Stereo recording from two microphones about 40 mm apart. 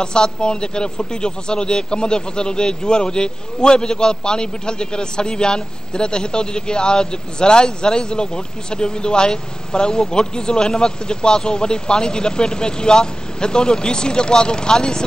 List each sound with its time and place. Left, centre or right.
0.0 s speech: centre